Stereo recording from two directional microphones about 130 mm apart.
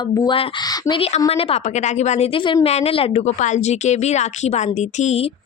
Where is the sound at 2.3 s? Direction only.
40° left (ahead or behind).